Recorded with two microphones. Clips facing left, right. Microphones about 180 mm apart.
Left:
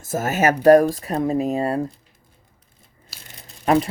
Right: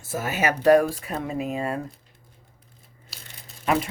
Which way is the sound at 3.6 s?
40° left (ahead or behind).